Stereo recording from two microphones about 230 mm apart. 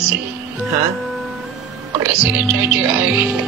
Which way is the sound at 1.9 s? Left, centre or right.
Centre.